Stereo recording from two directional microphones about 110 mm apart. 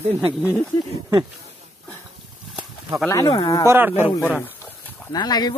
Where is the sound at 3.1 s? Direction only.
30° left (ahead or behind).